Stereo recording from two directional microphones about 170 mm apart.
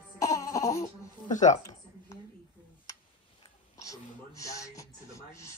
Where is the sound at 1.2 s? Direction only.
45° left (ahead or behind).